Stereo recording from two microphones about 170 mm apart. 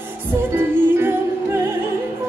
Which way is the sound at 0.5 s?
15° right (ahead or behind).